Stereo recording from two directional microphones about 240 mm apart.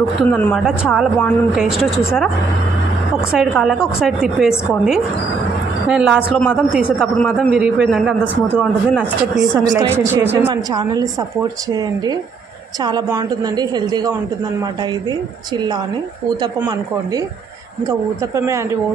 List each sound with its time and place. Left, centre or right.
0.3 s a man's voice: centre
3.3 s a man's voice: centre
9.7 s a woman's voice: centre